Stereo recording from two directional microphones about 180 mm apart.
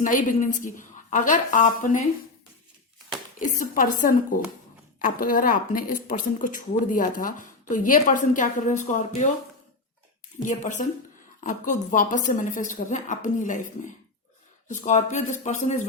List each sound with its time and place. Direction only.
0.0 s a woman's voice: 45° left (ahead or behind)
3.3 s a woman's voice: 50° left (ahead or behind)
10.5 s a woman's voice: 45° left (ahead or behind)